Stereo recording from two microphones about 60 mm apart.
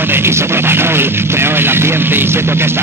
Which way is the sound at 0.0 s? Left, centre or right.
Right.